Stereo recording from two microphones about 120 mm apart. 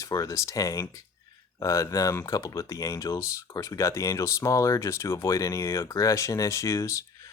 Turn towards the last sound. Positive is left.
turn(degrees=25)  # may be behind; listen again after turning